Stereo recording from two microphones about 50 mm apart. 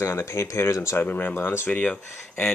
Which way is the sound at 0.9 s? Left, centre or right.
Left.